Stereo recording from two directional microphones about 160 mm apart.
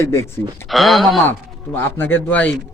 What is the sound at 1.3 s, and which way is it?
Speech, 15° left (ahead or behind).